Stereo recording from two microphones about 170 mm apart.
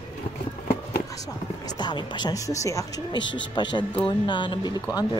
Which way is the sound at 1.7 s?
25° left (ahead or behind).